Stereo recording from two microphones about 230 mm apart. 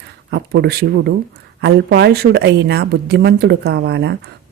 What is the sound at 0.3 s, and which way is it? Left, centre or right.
A woman's voice, right.